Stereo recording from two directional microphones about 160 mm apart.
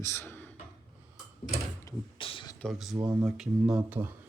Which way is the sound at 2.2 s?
35° left (ahead or behind).